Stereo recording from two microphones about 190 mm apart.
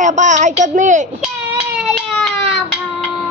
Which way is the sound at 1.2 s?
5° right (ahead or behind).